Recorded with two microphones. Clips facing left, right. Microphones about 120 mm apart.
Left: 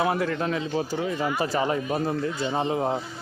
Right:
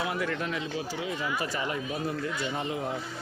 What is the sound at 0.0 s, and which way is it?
Speech, 35° left (ahead or behind).